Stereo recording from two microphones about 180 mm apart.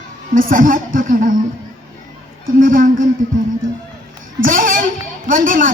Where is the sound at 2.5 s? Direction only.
50° right (ahead or behind).